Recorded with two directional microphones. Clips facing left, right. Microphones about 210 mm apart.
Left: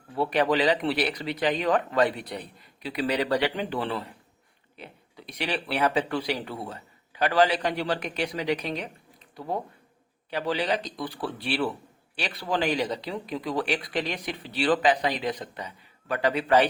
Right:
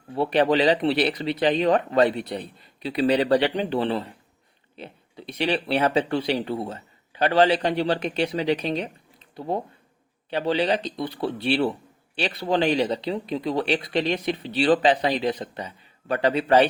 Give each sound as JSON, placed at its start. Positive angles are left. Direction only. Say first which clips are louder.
{"t": 0.1, "sound": "speech", "louder": "right 4 dB", "side_deg": -25}